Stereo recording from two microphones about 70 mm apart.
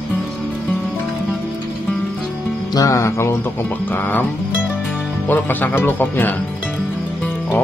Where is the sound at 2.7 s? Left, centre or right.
Left.